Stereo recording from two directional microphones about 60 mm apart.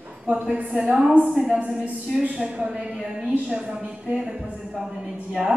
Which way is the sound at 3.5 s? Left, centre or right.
Centre.